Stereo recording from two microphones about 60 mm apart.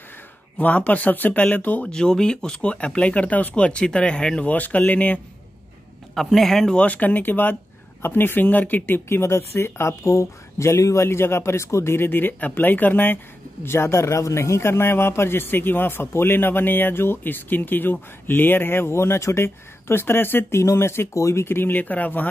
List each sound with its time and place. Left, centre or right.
0.6 s speech: left
1.9 s speech: centre
6.1 s a man's voice: centre
6.7 s speech: left
10.0 s speech: left
11.1 s speech: left
13.7 s a man's voice: left
21.1 s speech: left
21.5 s speech: left